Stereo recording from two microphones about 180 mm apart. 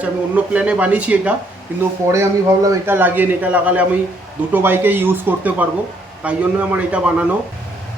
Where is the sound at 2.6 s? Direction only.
10° right (ahead or behind).